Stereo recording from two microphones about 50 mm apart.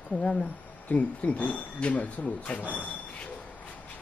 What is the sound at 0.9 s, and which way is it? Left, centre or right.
Speech, left.